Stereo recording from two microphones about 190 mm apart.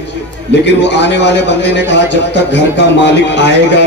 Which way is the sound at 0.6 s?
65° left (ahead or behind).